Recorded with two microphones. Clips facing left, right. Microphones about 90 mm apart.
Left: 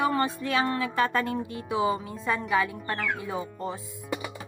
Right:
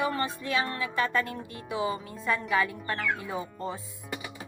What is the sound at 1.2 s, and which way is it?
Speech, 20° left (ahead or behind).